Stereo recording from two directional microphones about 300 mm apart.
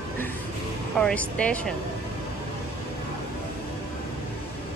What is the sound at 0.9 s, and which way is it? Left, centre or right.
Speech, centre.